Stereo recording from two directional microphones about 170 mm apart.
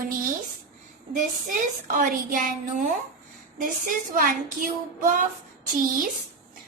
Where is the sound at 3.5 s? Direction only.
55° right (ahead or behind).